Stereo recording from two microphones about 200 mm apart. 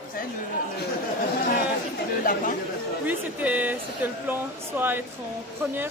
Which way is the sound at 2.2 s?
40° left (ahead or behind).